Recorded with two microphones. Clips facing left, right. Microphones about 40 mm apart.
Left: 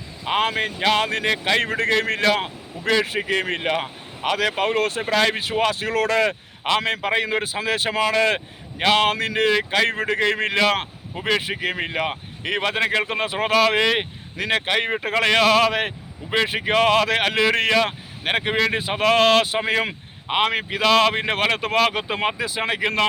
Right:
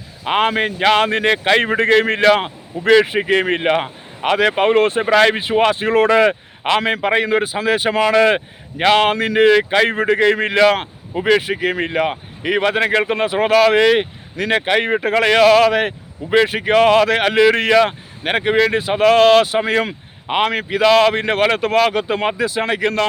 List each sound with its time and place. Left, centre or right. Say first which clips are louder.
0.3 s speech: right 5 dB; right
5.3 s a man's voice: right 6 dB; right
6.8 s a man's voice: right 5 dB; centre